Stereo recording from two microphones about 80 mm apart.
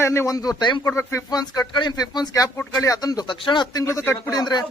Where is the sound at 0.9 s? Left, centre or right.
Left.